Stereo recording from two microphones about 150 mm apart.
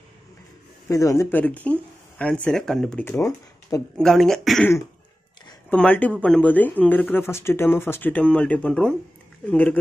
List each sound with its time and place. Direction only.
0.8 s speech: 20° left (ahead or behind)
3.2 s speech: 20° left (ahead or behind)
3.9 s speech: centre (ahead or behind)
5.7 s speech: 10° left (ahead or behind)